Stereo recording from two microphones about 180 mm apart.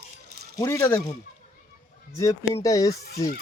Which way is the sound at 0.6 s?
15° left (ahead or behind).